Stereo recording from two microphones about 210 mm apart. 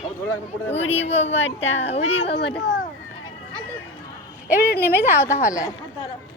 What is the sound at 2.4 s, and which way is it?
Speech, 55° left (ahead or behind).